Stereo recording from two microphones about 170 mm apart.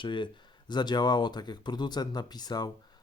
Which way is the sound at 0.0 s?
30° left (ahead or behind).